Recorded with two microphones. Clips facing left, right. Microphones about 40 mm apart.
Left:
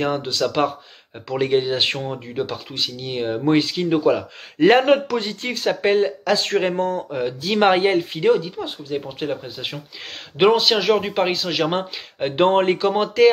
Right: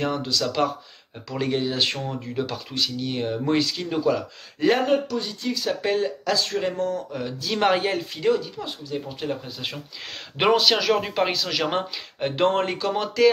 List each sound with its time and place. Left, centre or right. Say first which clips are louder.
0.0 s speech: left 3 dB; left
4.8 s speech: left 5 dB; left
5.4 s speech: left 4 dB; left
10.3 s speech: left 3 dB; centre; by 13.3 s left